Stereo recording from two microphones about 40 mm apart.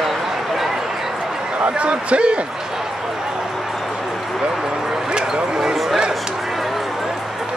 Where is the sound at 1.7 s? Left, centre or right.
Right.